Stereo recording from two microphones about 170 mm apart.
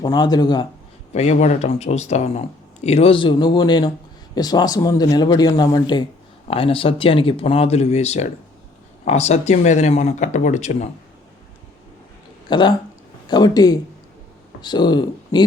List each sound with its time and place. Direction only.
0.0 s a man's voice: 25° left (ahead or behind)
1.1 s a man's voice: 40° left (ahead or behind)
12.5 s a man's voice: 25° left (ahead or behind)